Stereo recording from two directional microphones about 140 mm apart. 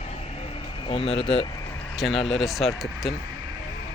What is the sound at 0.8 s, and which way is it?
Speech, 40° left (ahead or behind).